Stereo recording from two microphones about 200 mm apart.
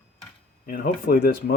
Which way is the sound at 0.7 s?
50° left (ahead or behind).